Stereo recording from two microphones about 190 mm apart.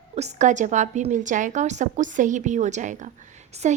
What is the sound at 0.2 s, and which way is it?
A woman's voice, 40° right (ahead or behind).